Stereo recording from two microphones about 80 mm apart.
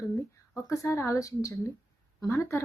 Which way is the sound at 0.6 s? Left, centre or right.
Left.